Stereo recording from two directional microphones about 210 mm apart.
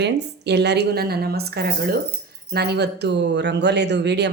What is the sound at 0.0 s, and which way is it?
Speech, 55° right (ahead or behind).